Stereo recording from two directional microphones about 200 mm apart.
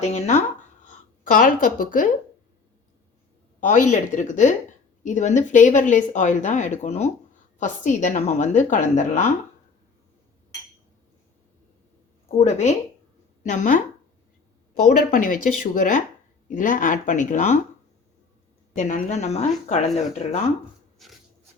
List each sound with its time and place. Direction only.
0.0 s speech: 35° left (ahead or behind)
3.6 s speech: 40° left (ahead or behind)
12.4 s speech: 35° left (ahead or behind)
14.8 s speech: 40° left (ahead or behind)
18.7 s speech: 40° left (ahead or behind)
21.0 s a sound: centre (ahead or behind)